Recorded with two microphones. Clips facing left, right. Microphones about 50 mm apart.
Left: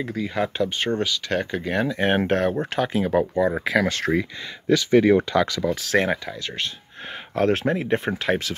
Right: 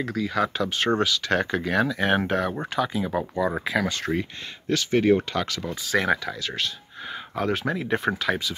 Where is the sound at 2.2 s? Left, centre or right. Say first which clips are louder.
Left 4 dB; left.